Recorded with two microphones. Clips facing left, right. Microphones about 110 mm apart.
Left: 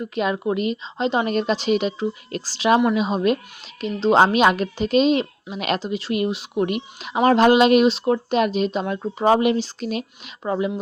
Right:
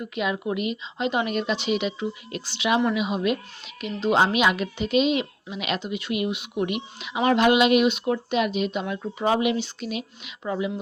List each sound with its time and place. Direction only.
0.2 s a woman's voice: 40° left (ahead or behind)